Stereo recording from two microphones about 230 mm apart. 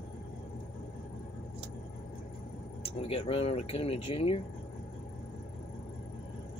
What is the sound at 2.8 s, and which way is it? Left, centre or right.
Speech, left.